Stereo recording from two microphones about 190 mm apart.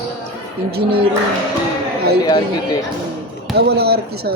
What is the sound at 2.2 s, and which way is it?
Speech, 20° left (ahead or behind).